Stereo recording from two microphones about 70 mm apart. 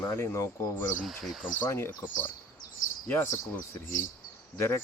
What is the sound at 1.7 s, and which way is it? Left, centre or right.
Speech, left.